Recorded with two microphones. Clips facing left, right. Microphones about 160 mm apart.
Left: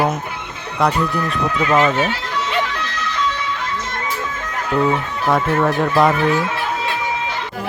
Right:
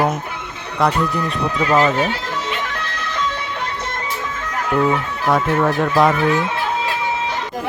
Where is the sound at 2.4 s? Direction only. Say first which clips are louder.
Left 3 dB; 55° right (ahead or behind).